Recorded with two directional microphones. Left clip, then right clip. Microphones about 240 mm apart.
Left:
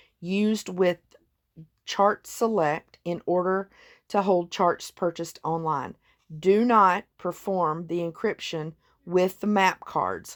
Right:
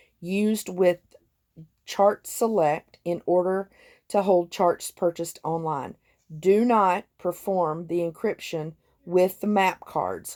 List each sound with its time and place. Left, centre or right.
0.0 s speech: centre